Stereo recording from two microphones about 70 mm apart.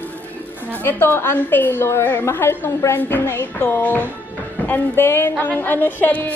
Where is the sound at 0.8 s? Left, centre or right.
Left.